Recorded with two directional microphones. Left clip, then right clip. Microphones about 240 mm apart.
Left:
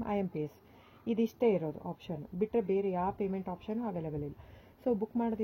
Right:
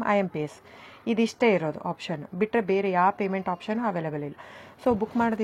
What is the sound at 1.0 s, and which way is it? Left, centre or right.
A woman's voice, right.